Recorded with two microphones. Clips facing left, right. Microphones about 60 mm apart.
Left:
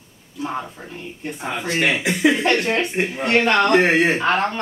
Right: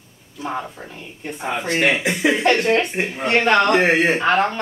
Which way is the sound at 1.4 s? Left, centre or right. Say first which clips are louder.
Right 2 dB; centre.